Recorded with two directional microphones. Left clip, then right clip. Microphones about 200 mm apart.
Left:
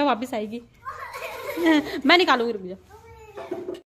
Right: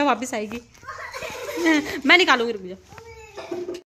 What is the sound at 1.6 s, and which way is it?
A child's voice, 10° left (ahead or behind).